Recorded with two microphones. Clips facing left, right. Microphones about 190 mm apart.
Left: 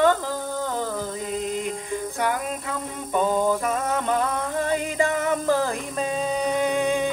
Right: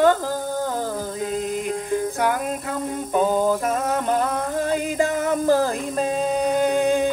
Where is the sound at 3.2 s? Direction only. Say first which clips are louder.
Right 2 dB; 5° right (ahead or behind).